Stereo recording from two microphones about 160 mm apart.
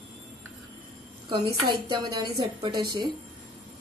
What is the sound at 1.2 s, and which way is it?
A woman's voice, 30° right (ahead or behind).